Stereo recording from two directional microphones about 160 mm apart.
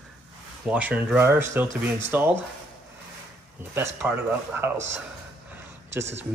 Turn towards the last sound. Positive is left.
turn(degrees=-15)  # may be behind; listen again after turning